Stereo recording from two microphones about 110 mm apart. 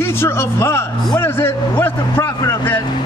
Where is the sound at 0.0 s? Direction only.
20° left (ahead or behind).